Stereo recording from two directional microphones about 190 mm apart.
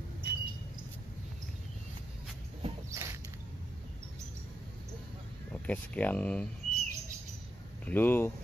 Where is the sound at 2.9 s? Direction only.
15° right (ahead or behind).